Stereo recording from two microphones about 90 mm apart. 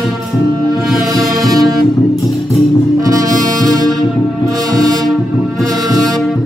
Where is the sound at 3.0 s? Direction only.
40° right (ahead or behind).